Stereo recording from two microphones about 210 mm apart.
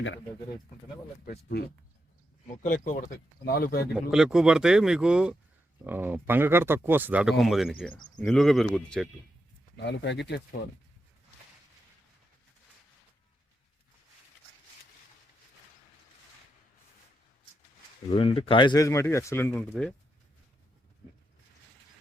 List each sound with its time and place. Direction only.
2.6 s speech: 40° left (ahead or behind)
4.1 s speech: 5° right (ahead or behind)
9.7 s speech: 55° left (ahead or behind)
18.1 s speech: 25° left (ahead or behind); by 19.9 s 10° left (ahead or behind)